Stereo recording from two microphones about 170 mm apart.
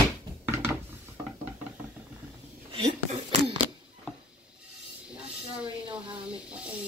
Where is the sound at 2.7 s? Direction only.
35° right (ahead or behind).